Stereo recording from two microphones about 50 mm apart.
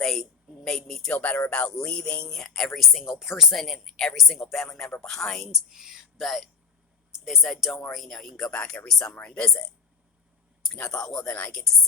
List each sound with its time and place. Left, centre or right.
0.0 s a sound: centre
1.1 s music: left
1.5 s speech: centre
1.8 s music: left
2.2 s speech: centre
3.5 s speech: centre
5.5 s speech: centre
10.9 s speech: centre
11.3 s music: left